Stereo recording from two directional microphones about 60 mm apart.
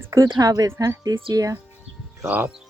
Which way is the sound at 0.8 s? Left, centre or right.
Right.